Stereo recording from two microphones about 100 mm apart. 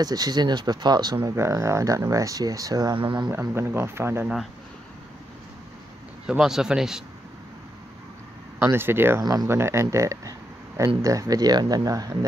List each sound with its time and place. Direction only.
0.0 s speech: 40° right (ahead or behind)
1.3 s speech: 25° right (ahead or behind)
3.3 s speech: 25° right (ahead or behind)
6.2 s speech: 5° right (ahead or behind)
8.5 s speech: 20° right (ahead or behind)
9.2 s speech: 40° right (ahead or behind)
9.5 s speech: 25° right (ahead or behind)